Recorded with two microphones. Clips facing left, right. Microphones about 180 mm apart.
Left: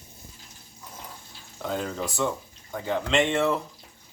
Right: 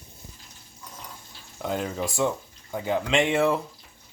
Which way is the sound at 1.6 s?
10° right (ahead or behind).